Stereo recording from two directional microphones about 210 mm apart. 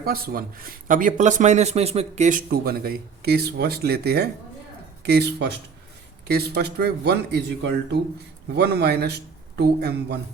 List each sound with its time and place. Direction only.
0.0 s speech: 45° right (ahead or behind)